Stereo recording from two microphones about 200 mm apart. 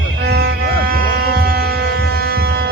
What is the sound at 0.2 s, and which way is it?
Music, 55° right (ahead or behind).